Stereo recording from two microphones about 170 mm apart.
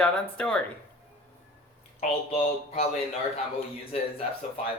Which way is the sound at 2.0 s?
40° left (ahead or behind).